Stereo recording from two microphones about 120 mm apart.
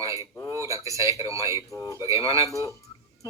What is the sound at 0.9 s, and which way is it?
Speech, 25° right (ahead or behind).